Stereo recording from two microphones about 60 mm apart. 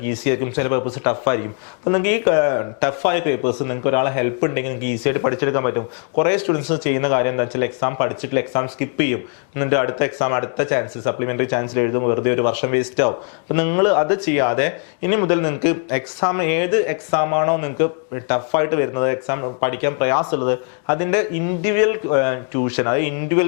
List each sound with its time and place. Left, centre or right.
0.0 s a man's voice: left